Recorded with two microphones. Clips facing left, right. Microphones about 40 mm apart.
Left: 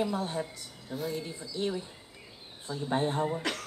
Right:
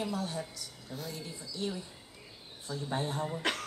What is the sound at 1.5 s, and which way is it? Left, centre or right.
Speech, left.